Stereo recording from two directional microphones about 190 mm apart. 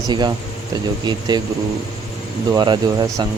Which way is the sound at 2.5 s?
20° right (ahead or behind).